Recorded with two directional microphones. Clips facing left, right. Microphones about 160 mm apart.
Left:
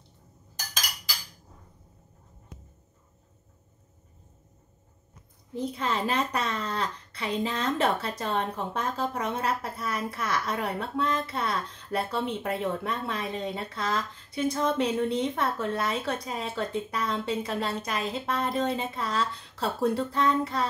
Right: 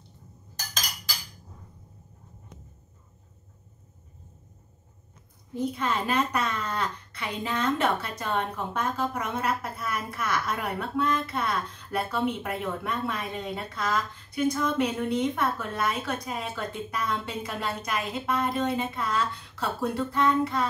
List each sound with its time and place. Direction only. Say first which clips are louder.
5.5 s a woman's voice: right 1 dB; 30° left (ahead or behind)